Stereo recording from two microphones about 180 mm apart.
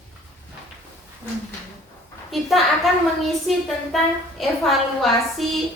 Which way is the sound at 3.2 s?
Centre (ahead or behind).